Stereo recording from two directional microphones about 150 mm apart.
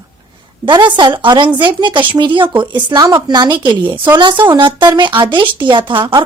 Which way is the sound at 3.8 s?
15° right (ahead or behind).